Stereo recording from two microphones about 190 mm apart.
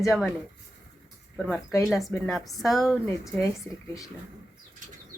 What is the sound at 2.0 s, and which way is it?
Speech, centre (ahead or behind).